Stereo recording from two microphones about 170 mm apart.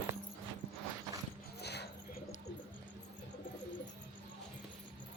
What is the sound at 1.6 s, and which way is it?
Dog, 75° left (ahead or behind).